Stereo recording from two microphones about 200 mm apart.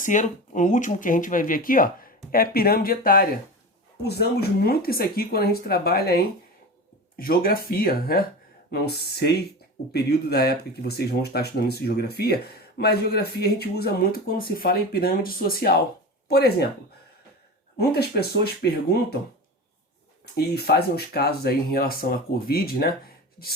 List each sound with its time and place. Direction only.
0.0 s speech: 40° left (ahead or behind)
17.7 s speech: 55° left (ahead or behind)
20.3 s speech: 50° left (ahead or behind)